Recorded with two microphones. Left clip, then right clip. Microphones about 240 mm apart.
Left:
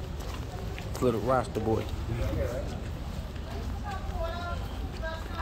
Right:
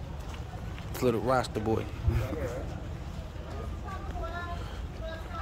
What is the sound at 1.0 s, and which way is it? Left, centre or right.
Speech, centre.